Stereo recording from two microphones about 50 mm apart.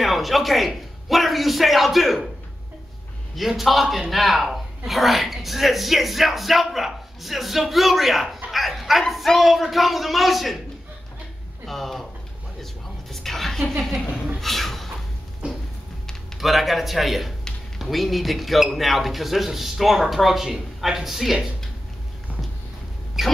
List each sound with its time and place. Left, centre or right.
0.0 s a man's voice: centre
3.3 s a woman's voice: centre
8.5 s dog: centre
9.1 s a woman's voice: centre
11.6 s a woman's voice: centre
13.1 s a sound: centre
15.4 s a sound: right
16.3 s a woman's voice: centre
23.2 s speech: centre